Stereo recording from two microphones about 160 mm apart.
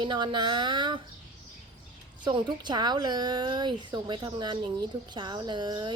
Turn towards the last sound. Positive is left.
turn(degrees=-30)  # may be behind; listen again after turning